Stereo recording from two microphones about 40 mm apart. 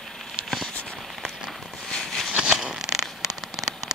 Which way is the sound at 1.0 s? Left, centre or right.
Centre.